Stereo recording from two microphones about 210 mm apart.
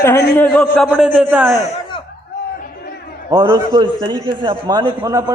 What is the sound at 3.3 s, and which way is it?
A man's voice, 20° right (ahead or behind).